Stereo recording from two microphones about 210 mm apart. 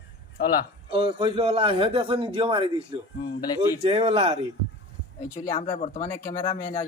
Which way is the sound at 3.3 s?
20° left (ahead or behind).